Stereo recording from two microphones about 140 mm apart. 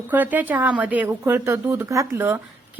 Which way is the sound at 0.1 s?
10° right (ahead or behind).